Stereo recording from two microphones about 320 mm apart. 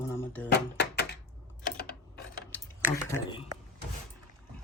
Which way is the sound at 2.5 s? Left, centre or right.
Centre.